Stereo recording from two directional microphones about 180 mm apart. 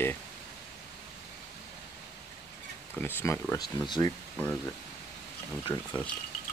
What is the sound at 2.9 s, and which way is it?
Speech, 15° left (ahead or behind).